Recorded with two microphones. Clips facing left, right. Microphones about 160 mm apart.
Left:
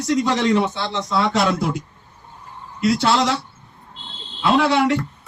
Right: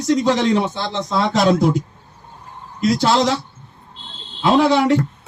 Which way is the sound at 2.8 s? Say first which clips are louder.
Right 2 dB; 40° right (ahead or behind).